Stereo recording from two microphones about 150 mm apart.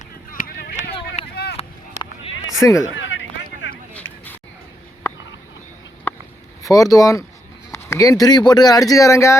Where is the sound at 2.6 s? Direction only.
20° left (ahead or behind).